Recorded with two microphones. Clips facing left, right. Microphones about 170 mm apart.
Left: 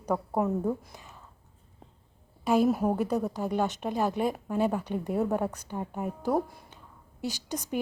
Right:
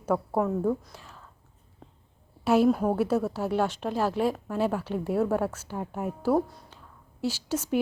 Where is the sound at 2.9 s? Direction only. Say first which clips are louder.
Right 2 dB; 5° right (ahead or behind).